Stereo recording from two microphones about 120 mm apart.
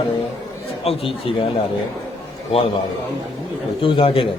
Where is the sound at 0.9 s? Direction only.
55° left (ahead or behind).